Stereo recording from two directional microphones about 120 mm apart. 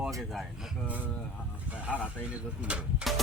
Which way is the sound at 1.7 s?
10° right (ahead or behind).